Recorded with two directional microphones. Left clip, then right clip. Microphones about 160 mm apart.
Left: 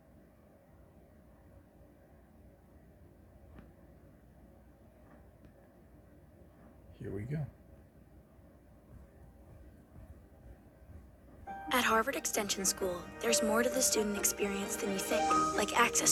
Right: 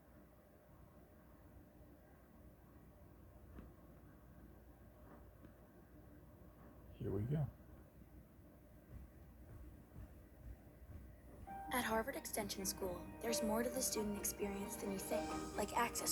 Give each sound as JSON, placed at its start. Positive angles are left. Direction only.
{"t": 7.0, "sound": "speech", "side_deg": 5}
{"t": 11.7, "sound": "speech", "side_deg": 30}